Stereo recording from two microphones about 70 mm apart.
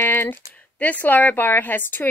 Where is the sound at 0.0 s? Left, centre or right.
Left.